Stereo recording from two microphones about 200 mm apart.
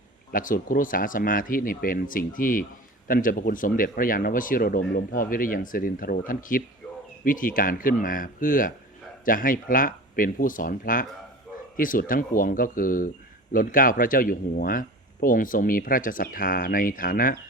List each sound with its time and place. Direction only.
0.3 s speech: 45° left (ahead or behind)